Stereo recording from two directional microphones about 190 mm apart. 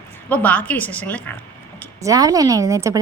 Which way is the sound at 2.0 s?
20° right (ahead or behind).